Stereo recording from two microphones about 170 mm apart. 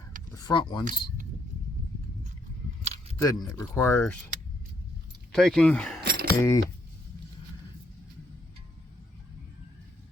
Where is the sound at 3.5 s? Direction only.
15° left (ahead or behind).